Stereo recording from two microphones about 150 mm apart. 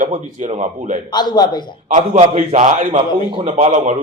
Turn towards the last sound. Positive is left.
turn(degrees=-50)  # may be behind; listen again after turning